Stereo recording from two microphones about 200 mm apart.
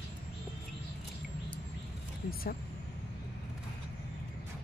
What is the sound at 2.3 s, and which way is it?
Speech, 50° left (ahead or behind).